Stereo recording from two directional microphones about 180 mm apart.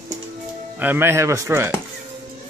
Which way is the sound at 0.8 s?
10° right (ahead or behind).